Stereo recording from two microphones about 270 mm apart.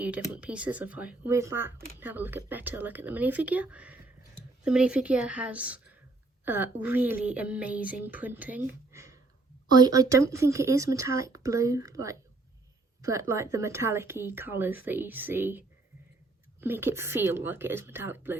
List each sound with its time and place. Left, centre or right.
0.3 s a woman's voice: centre